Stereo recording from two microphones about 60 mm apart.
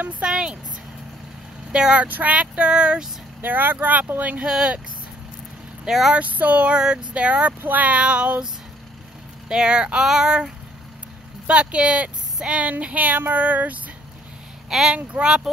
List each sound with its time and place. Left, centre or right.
0.2 s speech: centre
1.7 s speech: centre
2.0 s speech: right
3.3 s speech: right
4.5 s speech: centre
5.9 s speech: centre
6.1 s speech: right
9.5 s speech: centre
14.7 s speech: centre